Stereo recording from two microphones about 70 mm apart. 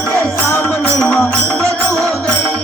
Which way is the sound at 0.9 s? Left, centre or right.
Centre.